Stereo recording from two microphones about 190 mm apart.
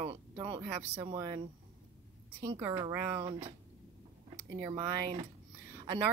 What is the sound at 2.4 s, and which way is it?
A woman's voice, 20° right (ahead or behind).